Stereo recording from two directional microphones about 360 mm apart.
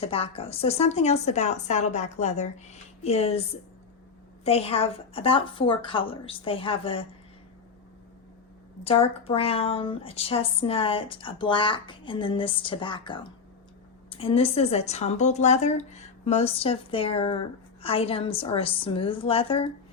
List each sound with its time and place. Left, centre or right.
0.0 s speech: centre
4.4 s speech: centre
8.8 s speech: centre